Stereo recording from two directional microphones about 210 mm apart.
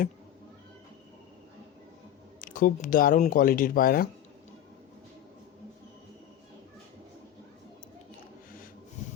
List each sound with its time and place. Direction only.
2.4 s speech: 40° left (ahead or behind)